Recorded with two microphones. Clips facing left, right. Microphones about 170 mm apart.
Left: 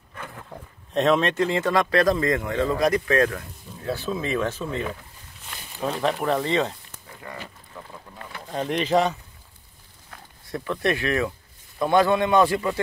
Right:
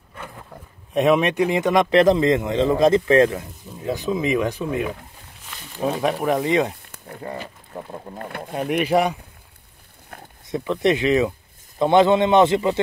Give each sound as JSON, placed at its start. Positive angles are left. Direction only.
{"t": 0.9, "sound": "speech", "side_deg": -10}
{"t": 7.2, "sound": "speech", "side_deg": -35}
{"t": 8.5, "sound": "speech", "side_deg": -10}
{"t": 10.4, "sound": "speech", "side_deg": -20}